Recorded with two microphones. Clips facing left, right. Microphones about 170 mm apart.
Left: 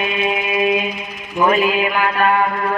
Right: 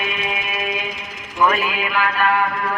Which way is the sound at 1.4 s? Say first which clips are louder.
Left 4 dB; 25° left (ahead or behind).